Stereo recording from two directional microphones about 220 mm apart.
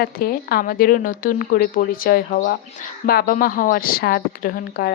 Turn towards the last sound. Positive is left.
turn(degrees=40)  # may be behind; listen again after turning